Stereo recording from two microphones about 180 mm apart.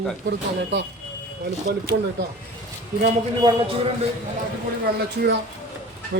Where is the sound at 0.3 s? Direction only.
70° right (ahead or behind).